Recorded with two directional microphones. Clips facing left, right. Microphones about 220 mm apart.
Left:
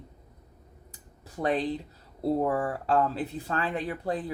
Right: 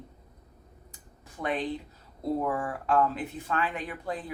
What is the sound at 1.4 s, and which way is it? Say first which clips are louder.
Speech: left 3 dB; 35° left (ahead or behind).